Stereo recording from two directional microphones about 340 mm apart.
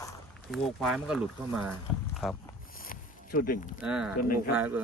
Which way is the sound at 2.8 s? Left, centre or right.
Left.